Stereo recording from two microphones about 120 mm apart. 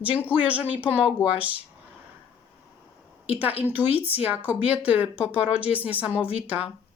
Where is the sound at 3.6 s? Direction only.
15° right (ahead or behind).